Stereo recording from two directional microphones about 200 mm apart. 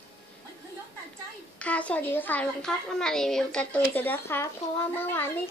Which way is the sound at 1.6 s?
5° left (ahead or behind).